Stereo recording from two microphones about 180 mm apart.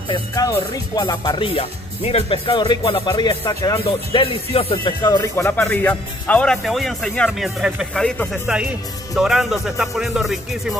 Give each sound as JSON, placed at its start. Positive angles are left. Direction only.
{"t": 0.1, "sound": "speech", "side_deg": 20}
{"t": 3.8, "sound": "speech", "side_deg": 30}